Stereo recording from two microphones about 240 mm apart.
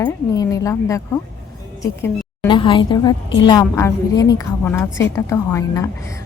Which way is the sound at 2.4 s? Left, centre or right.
Centre.